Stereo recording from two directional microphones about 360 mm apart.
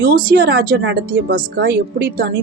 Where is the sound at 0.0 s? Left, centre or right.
Right.